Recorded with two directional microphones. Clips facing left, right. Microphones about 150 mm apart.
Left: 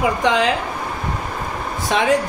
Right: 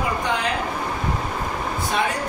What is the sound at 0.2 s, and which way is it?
Speech, 90° left.